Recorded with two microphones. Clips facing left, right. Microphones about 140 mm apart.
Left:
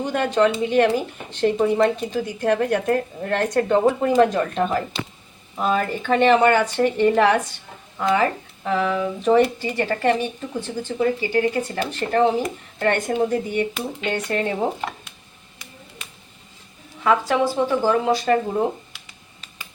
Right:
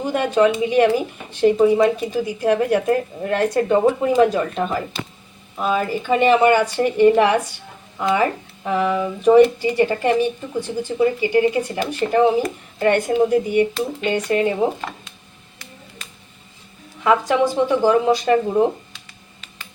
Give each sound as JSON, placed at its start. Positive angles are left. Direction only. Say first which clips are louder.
{"t": 0.0, "sound": "speech", "louder": "right 2 dB", "side_deg": -10}
{"t": 17.0, "sound": "speech", "louder": "right 2 dB", "side_deg": -15}